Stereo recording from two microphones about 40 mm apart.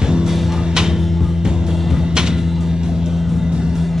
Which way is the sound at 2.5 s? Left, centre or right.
Centre.